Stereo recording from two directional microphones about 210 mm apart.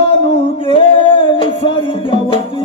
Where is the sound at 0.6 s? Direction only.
25° left (ahead or behind).